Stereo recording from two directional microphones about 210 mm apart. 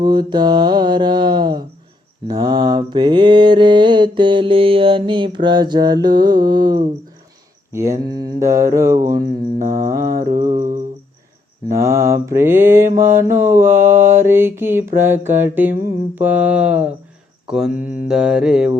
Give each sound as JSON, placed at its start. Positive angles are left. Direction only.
{"t": 0.0, "sound": "mantra", "side_deg": -20}
{"t": 9.6, "sound": "mantra", "side_deg": -35}
{"t": 9.8, "sound": "mantra", "side_deg": -15}
{"t": 11.7, "sound": "mantra", "side_deg": -15}